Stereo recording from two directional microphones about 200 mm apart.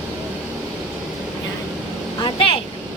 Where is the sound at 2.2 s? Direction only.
25° left (ahead or behind).